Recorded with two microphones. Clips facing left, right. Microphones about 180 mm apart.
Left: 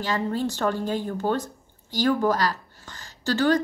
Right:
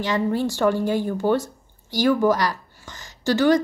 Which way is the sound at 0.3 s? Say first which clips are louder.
Right 4 dB; 15° right (ahead or behind).